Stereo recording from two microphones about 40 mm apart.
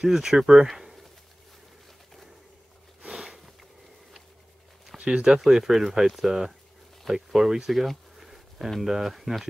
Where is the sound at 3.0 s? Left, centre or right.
Centre.